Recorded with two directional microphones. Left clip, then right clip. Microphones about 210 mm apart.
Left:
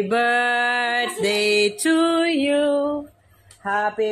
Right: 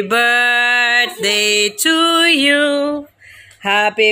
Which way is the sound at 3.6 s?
40° right (ahead or behind).